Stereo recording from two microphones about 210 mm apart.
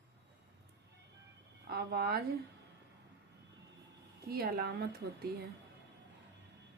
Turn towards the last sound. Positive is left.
turn(degrees=-50)  # may be behind; listen again after turning